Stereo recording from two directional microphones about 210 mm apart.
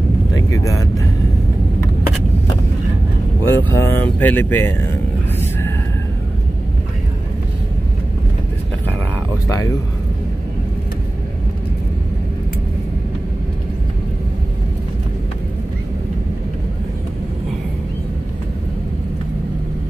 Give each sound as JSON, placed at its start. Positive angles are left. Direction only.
{"t": 0.5, "sound": "speech", "side_deg": 15}
{"t": 3.4, "sound": "speech", "side_deg": 10}
{"t": 9.5, "sound": "speech", "side_deg": 15}